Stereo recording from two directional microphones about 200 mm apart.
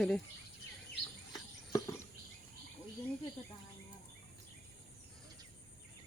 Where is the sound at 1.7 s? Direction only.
20° left (ahead or behind).